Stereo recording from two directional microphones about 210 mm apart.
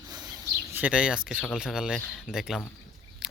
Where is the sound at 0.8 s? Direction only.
5° right (ahead or behind).